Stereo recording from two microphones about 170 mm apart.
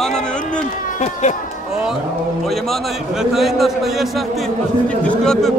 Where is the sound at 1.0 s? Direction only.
45° left (ahead or behind).